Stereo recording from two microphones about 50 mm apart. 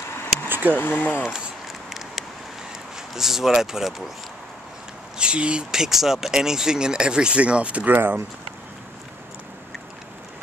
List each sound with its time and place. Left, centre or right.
0.5 s a sound: right
0.7 s speech: left
3.2 s speech: centre
5.1 s speech: centre
5.7 s speech: centre; by 7.9 s right
7.9 s speech: right